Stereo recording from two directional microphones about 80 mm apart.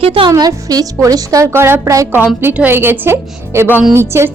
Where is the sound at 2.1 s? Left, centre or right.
Right.